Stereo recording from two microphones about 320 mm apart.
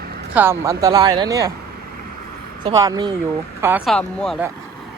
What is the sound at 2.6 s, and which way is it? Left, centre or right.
Speech, centre.